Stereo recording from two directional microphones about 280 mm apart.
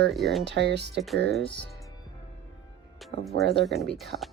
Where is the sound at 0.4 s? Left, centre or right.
Right.